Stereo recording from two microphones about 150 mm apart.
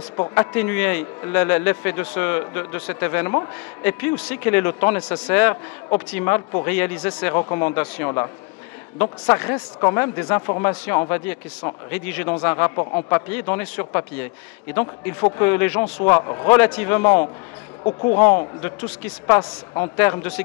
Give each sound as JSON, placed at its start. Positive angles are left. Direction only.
{"t": 0.3, "sound": "a man's voice", "side_deg": 15}
{"t": 9.2, "sound": "a man's voice", "side_deg": 20}
{"t": 13.3, "sound": "a man's voice", "side_deg": 15}
{"t": 16.1, "sound": "speech", "side_deg": 25}
{"t": 16.4, "sound": "a man's voice", "side_deg": 10}
{"t": 19.2, "sound": "a man's voice", "side_deg": 20}